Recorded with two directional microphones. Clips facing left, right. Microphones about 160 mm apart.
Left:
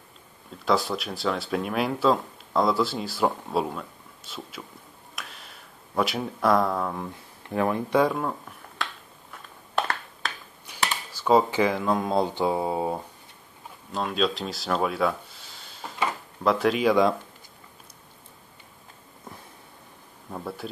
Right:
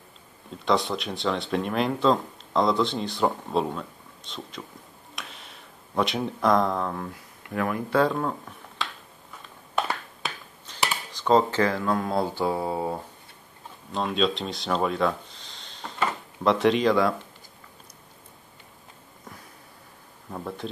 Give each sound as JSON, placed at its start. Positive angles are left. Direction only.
{"t": 0.7, "sound": "speech", "side_deg": 0}
{"t": 5.1, "sound": "a sound", "side_deg": 0}
{"t": 7.4, "sound": "speech", "side_deg": 25}
{"t": 8.0, "sound": "speech", "side_deg": 5}
{"t": 9.8, "sound": "a sound", "side_deg": -5}
{"t": 10.7, "sound": "speech", "side_deg": 10}
{"t": 13.9, "sound": "speech", "side_deg": 0}
{"t": 20.2, "sound": "speech", "side_deg": 5}